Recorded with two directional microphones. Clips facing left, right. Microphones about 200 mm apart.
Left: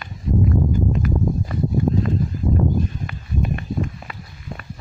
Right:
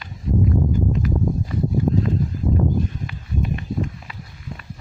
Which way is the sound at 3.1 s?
55° left (ahead or behind).